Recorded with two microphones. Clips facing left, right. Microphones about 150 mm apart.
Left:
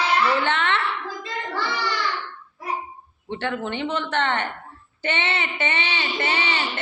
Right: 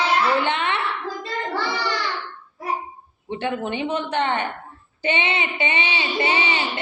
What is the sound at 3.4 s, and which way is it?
Speech, 15° right (ahead or behind).